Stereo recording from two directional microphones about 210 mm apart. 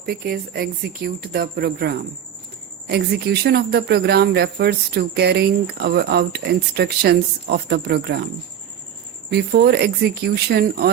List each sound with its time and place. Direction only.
0.0 s speech: 45° right (ahead or behind)
9.3 s speech: 50° right (ahead or behind)